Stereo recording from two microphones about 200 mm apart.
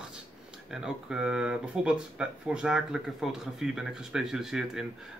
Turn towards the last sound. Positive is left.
turn(degrees=0)  # may be behind; listen again after turning